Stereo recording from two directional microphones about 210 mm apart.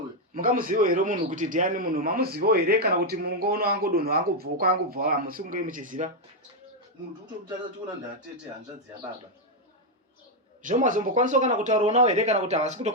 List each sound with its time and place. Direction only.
0.3 s a man's voice: 40° right (ahead or behind)
10.6 s speech: 40° right (ahead or behind)